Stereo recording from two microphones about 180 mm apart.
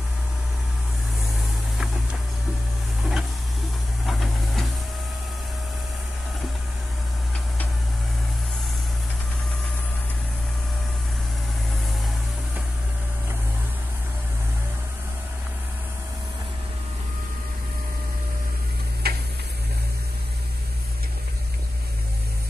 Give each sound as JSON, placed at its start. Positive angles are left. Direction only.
{"t": 3.0, "sound": "printer", "side_deg": 0}
{"t": 4.0, "sound": "steam", "side_deg": 0}
{"t": 19.0, "sound": "tick-tock", "side_deg": -60}